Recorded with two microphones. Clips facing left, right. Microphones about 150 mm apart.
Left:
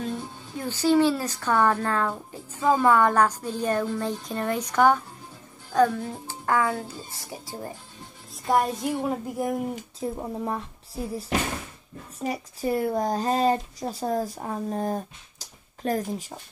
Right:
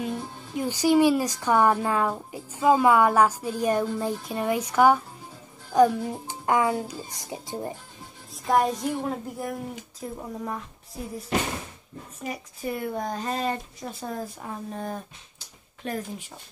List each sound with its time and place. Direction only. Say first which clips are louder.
0.0 s a woman's voice: even; 10° right (ahead or behind)
8.5 s a woman's voice: even; centre (ahead or behind)
9.4 s speech: left 5 dB; 20° left (ahead or behind)
12.2 s speech: left 5 dB; 35° left (ahead or behind)